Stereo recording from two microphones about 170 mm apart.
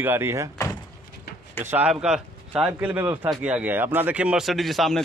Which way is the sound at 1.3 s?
70° left (ahead or behind).